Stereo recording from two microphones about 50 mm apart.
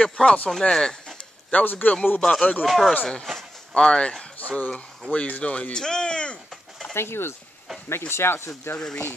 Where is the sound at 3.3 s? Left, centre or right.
Centre.